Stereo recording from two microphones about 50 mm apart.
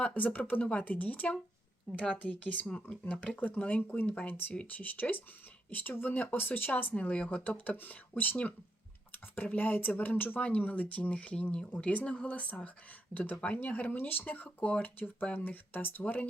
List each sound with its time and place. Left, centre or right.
0.0 s speech: left
2.1 s speech: left
4.3 s speech: left
6.9 s speech: left